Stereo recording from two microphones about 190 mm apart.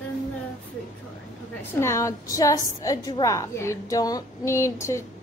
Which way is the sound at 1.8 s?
15° left (ahead or behind).